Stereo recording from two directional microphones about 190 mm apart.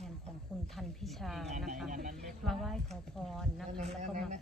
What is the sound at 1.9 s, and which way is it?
Speech, 45° right (ahead or behind).